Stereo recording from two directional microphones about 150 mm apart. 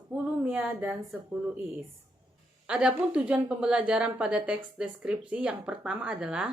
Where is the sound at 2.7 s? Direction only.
5° right (ahead or behind).